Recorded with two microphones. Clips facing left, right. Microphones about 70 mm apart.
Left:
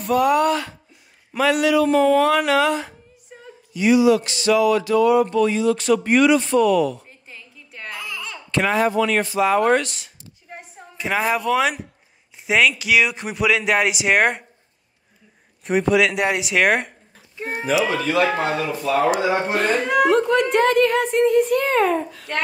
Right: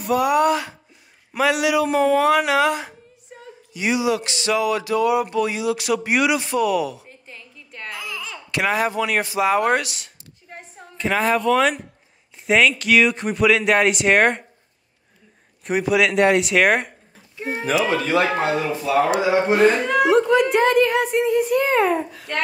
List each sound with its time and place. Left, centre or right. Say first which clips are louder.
0.0 s speech: even; centre
3.7 s a sound: left 6 dB; centre
8.9 s a woman's voice: left 2 dB; centre
15.6 s speech: left 1 dB; centre
17.4 s a sound: right 1 dB; left
17.6 s speech: even; right
19.3 s speech: right 4 dB; centre